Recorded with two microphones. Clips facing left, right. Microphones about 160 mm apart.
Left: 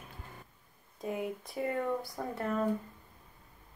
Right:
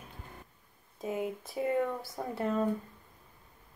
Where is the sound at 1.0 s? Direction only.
20° right (ahead or behind).